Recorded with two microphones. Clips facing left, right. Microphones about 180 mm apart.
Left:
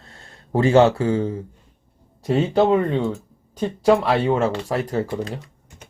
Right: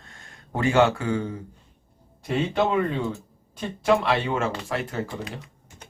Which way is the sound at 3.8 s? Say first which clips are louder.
Left 5 dB; 35° left (ahead or behind).